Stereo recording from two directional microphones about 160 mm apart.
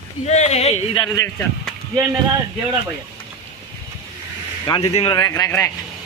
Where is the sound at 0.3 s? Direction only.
45° left (ahead or behind).